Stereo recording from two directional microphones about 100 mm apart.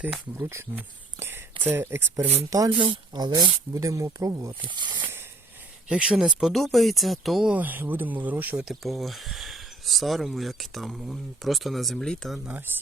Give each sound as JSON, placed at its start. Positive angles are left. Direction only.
{"t": 0.3, "sound": "speech", "side_deg": -20}
{"t": 2.6, "sound": "speech", "side_deg": -55}
{"t": 3.8, "sound": "speech", "side_deg": -35}
{"t": 4.6, "sound": "speech", "side_deg": -50}
{"t": 5.9, "sound": "speech", "side_deg": -10}
{"t": 7.5, "sound": "speech", "side_deg": -20}
{"t": 8.6, "sound": "speech", "side_deg": 0}
{"t": 12.7, "sound": "speech", "side_deg": -20}